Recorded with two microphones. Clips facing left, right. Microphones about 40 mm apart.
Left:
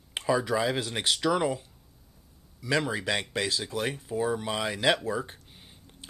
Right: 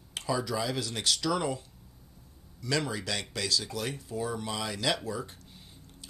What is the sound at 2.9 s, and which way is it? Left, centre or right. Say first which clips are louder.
Speech: left 5 dB; left.